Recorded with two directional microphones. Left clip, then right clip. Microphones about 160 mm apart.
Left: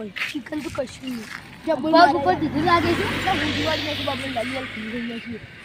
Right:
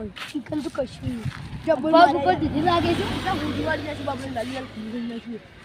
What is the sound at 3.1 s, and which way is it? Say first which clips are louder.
Speech: left 4 dB; 90° right.